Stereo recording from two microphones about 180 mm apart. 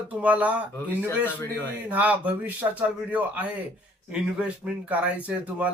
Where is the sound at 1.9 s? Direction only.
10° right (ahead or behind).